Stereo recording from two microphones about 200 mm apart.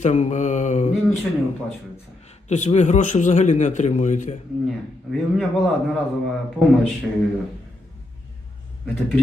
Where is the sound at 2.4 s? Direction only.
35° left (ahead or behind).